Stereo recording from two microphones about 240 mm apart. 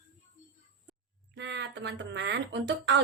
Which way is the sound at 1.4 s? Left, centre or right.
Right.